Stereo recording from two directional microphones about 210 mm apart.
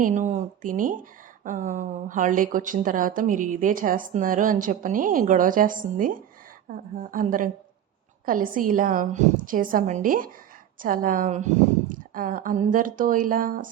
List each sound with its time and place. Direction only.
0.0 s a woman's voice: 35° right (ahead or behind)